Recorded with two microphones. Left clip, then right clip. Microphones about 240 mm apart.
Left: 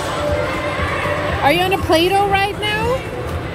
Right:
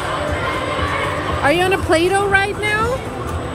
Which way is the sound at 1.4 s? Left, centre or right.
Centre.